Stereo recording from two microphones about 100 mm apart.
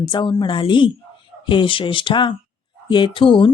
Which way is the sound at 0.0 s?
50° left (ahead or behind).